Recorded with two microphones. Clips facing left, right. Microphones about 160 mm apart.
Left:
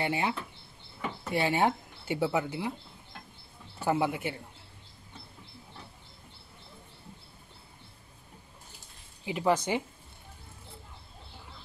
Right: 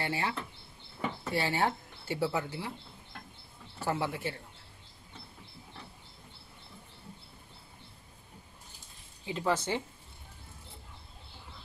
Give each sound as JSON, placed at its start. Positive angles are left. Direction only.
{"t": 0.0, "sound": "speech", "side_deg": 20}
{"t": 3.8, "sound": "speech", "side_deg": 20}
{"t": 9.2, "sound": "speech", "side_deg": 15}